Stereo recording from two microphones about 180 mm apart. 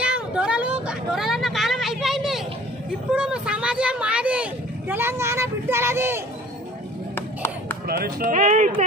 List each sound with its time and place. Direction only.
0.0 s vehicle: 5° right (ahead or behind)
3.1 s speech: 5° right (ahead or behind)
7.9 s speech: 50° right (ahead or behind)